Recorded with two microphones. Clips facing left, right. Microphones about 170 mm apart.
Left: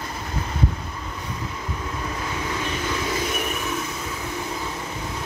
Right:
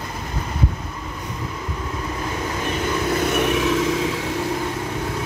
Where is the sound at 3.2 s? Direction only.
75° right (ahead or behind).